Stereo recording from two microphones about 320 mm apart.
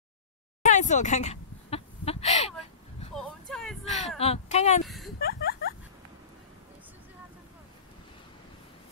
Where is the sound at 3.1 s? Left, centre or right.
Centre.